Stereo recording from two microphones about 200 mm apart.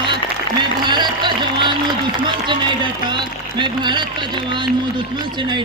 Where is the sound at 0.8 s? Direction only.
20° right (ahead or behind).